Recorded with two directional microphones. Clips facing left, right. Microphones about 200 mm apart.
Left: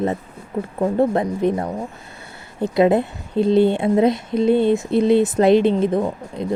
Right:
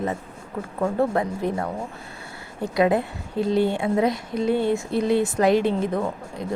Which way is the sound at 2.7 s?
25° left (ahead or behind).